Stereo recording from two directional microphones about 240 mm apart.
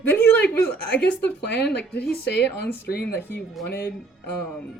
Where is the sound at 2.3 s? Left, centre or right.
Left.